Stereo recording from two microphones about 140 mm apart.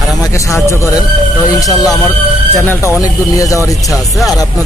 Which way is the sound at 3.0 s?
25° left (ahead or behind).